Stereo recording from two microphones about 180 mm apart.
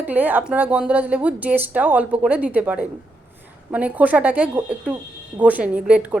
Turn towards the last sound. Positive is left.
turn(degrees=-5)  # may be behind; listen again after turning